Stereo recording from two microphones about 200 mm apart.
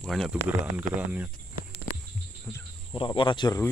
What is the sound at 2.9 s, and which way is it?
Speech, 25° left (ahead or behind).